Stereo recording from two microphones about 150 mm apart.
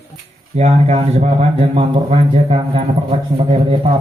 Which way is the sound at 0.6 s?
50° right (ahead or behind).